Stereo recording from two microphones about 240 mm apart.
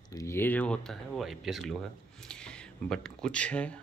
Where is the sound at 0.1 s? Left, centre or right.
Centre.